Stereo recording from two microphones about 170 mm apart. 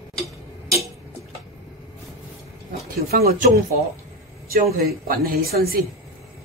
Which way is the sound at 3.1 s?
65° right (ahead or behind).